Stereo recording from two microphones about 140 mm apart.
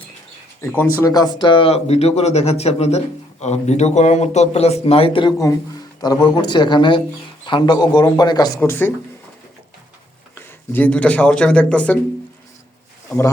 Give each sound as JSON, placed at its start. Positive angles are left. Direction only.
{"t": 0.6, "sound": "speech", "side_deg": 20}
{"t": 6.0, "sound": "speech", "side_deg": 30}
{"t": 8.6, "sound": "speech", "side_deg": 15}
{"t": 10.3, "sound": "speech", "side_deg": 15}